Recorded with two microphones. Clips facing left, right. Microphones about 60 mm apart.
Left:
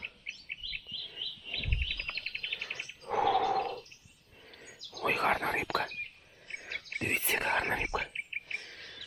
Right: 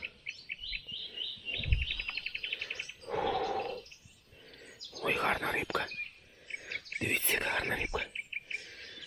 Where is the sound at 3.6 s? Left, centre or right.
Left.